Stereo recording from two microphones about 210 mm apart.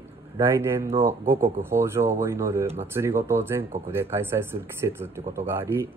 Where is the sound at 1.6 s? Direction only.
10° right (ahead or behind).